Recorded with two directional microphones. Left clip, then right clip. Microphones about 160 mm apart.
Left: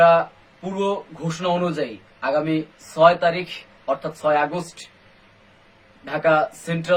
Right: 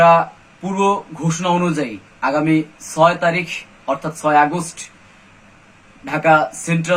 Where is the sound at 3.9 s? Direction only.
15° left (ahead or behind).